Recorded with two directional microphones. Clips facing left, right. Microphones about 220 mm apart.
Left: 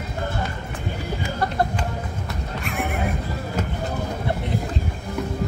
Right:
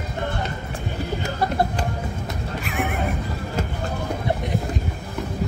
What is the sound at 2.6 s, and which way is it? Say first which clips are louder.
Neigh: right 1 dB; centre (ahead or behind).